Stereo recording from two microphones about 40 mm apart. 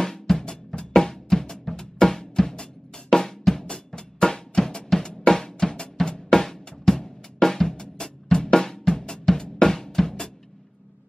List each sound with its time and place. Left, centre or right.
0.0 s drum: centre